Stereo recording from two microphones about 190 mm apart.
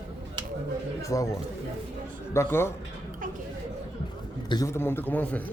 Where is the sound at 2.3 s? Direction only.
15° left (ahead or behind).